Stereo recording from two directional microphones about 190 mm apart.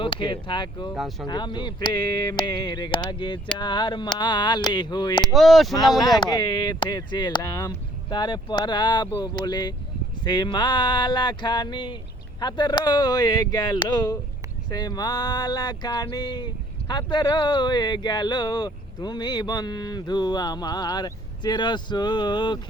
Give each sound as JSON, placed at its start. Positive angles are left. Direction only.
{"t": 0.0, "sound": "speech", "side_deg": 25}
{"t": 0.9, "sound": "speech", "side_deg": 0}
{"t": 1.3, "sound": "speech", "side_deg": 25}
{"t": 5.2, "sound": "speech", "side_deg": 0}
{"t": 6.1, "sound": "speech", "side_deg": 20}